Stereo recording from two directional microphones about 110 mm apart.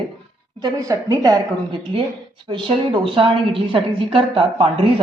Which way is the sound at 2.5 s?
50° right (ahead or behind).